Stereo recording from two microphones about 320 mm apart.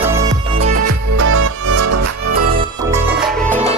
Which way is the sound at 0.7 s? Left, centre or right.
Right.